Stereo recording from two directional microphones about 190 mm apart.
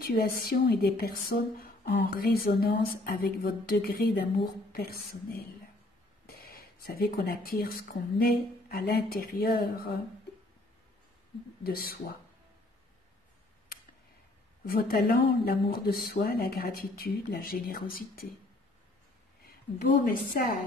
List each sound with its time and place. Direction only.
0.0 s speech: 50° left (ahead or behind)
6.2 s a sound: 50° left (ahead or behind)
8.2 s speech: 55° left (ahead or behind)
11.6 s speech: 50° left (ahead or behind)
14.7 s speech: 50° left (ahead or behind)
19.4 s a woman's voice: 50° left (ahead or behind)